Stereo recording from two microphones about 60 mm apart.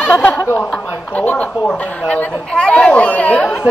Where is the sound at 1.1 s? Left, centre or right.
Left.